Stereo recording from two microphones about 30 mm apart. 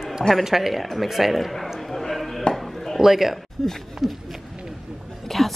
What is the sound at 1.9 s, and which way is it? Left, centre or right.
Chopping, centre.